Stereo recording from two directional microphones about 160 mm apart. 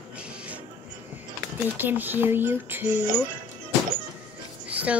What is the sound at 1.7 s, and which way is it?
Speech, 10° right (ahead or behind).